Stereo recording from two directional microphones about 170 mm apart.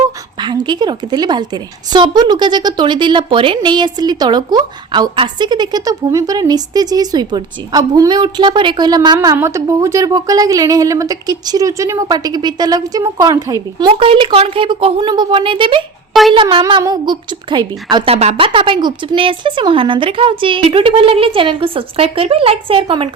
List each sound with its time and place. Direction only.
0.4 s a woman's voice: 25° right (ahead or behind)